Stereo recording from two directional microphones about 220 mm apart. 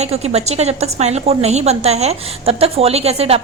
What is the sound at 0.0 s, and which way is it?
A woman's voice, 30° right (ahead or behind).